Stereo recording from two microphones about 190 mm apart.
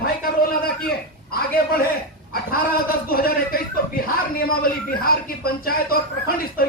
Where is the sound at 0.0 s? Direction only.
50° left (ahead or behind).